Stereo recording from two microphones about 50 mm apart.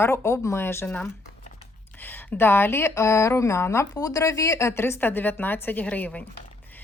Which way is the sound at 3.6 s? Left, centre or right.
Left.